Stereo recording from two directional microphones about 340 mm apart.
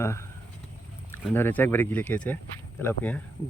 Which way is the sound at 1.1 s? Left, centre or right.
Centre.